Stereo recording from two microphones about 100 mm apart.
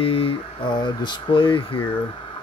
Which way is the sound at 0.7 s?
50° left (ahead or behind).